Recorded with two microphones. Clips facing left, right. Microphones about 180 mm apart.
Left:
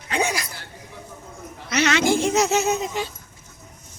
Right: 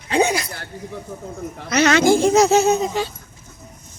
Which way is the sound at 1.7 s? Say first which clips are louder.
Right 5 dB; 40° right (ahead or behind).